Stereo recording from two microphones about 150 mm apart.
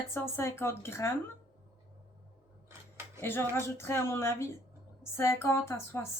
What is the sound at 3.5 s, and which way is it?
Speech, 15° left (ahead or behind).